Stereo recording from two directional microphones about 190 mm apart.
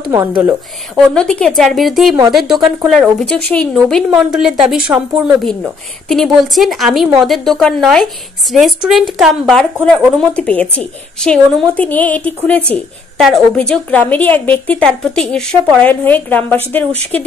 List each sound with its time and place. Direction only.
0.0 s speech: 15° right (ahead or behind)
0.9 s a woman's voice: 5° left (ahead or behind)